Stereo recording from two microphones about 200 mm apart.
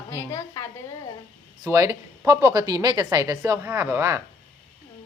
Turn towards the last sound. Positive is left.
turn(degrees=-15)  # may be behind; listen again after turning